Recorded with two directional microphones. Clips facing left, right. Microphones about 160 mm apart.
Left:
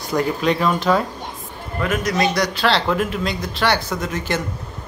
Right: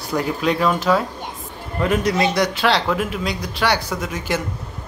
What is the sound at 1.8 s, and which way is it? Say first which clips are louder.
A man's voice: right 2 dB; 30° right (ahead or behind).